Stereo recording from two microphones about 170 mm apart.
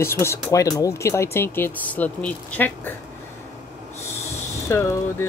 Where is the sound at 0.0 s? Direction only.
15° left (ahead or behind).